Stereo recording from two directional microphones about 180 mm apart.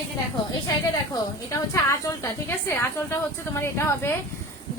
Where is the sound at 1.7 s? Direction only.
15° left (ahead or behind).